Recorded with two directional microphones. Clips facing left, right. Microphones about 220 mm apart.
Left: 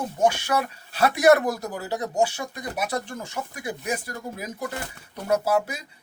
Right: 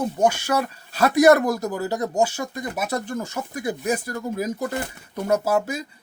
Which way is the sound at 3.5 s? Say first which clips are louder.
Right 6 dB; 40° right (ahead or behind).